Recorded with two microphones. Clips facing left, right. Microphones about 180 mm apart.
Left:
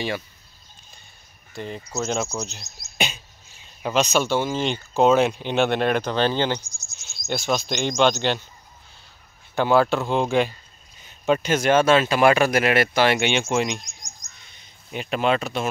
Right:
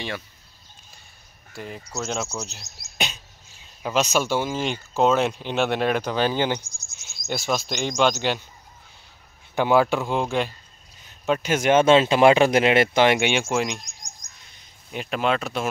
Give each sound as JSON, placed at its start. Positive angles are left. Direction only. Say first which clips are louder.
{"t": 1.5, "sound": "speech", "louder": "left 3 dB", "side_deg": -5}
{"t": 3.8, "sound": "speech", "louder": "left 1 dB", "side_deg": -5}
{"t": 9.6, "sound": "speech", "louder": "even", "side_deg": -15}
{"t": 11.5, "sound": "speech", "louder": "right 2 dB", "side_deg": -20}
{"t": 13.5, "sound": "speech", "louder": "left 1 dB", "side_deg": 0}
{"t": 14.9, "sound": "speech", "louder": "left 2 dB", "side_deg": 0}